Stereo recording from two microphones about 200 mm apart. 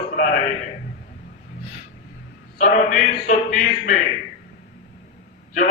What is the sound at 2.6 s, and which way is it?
A man's voice, 40° left (ahead or behind).